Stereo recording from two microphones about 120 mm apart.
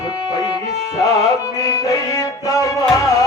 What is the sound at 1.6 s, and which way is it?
Music, 30° left (ahead or behind).